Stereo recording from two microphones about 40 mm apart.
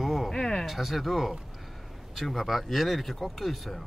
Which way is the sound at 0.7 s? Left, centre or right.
Centre.